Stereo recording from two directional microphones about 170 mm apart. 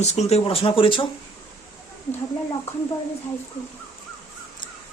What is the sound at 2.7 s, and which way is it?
Speech, 35° left (ahead or behind).